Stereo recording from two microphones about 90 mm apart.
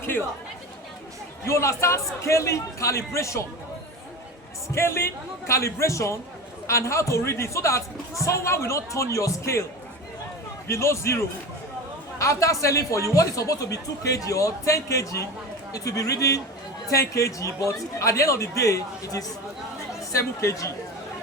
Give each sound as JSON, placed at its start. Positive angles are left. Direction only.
{"t": 0.0, "sound": "chatter", "side_deg": 25}
{"t": 1.5, "sound": "speech", "side_deg": 30}
{"t": 4.7, "sound": "speech", "side_deg": 30}
{"t": 10.7, "sound": "speech", "side_deg": 30}